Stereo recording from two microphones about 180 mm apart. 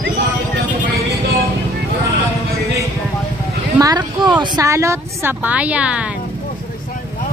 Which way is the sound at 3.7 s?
20° right (ahead or behind).